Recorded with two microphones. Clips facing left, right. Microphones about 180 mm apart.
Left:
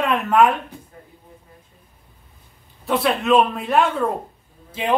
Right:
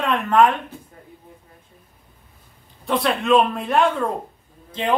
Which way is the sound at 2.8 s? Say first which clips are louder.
Left 1 dB; 5° left (ahead or behind).